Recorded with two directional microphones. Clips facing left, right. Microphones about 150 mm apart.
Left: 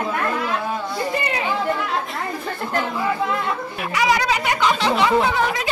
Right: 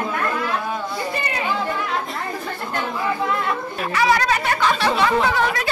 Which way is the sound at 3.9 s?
15° left (ahead or behind).